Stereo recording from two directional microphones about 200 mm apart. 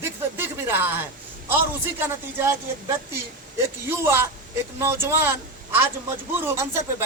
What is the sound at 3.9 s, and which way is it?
A man's voice, 10° right (ahead or behind).